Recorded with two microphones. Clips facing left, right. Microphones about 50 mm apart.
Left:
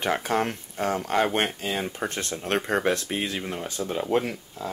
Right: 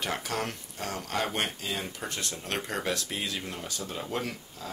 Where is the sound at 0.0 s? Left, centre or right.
Left.